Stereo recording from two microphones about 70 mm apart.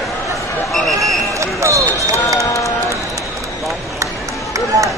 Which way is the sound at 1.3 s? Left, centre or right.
Right.